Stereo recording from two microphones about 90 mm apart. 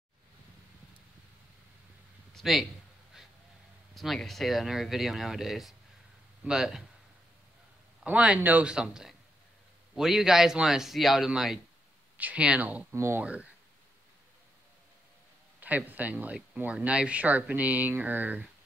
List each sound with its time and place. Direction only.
2.3 s a sound: centre (ahead or behind)
3.9 s speech: centre (ahead or behind)
8.0 s speech: 15° right (ahead or behind)
12.9 s speech: 30° right (ahead or behind)
13.2 s speech: 15° right (ahead or behind)
15.6 s speech: 20° right (ahead or behind)